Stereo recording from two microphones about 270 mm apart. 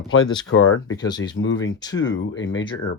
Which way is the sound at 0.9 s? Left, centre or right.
Centre.